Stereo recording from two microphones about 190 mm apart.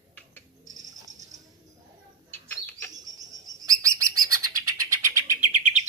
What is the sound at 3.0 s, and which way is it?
Bird, 20° right (ahead or behind).